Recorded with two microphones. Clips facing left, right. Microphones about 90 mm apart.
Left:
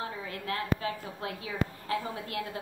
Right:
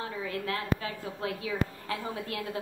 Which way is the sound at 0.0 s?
35° left (ahead or behind).